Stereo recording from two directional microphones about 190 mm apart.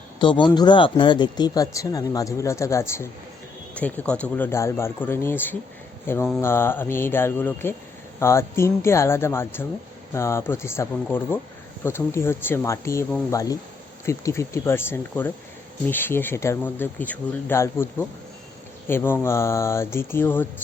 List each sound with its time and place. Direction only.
0.2 s speech: 25° left (ahead or behind)